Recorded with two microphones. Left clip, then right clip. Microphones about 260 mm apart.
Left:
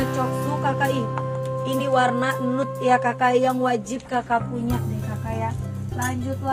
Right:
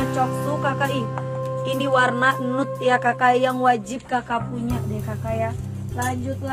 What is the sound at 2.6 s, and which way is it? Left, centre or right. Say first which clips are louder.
Speech: even; centre.